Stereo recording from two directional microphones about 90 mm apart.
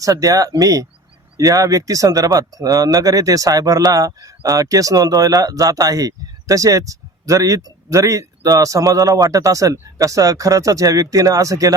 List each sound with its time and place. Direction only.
0.0 s speech: 40° right (ahead or behind)